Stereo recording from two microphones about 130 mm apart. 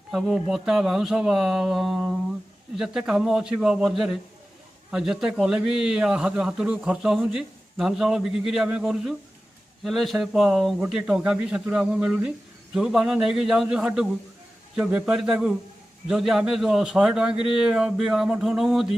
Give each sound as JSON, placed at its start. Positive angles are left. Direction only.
{"t": 0.1, "sound": "a man's voice", "side_deg": 0}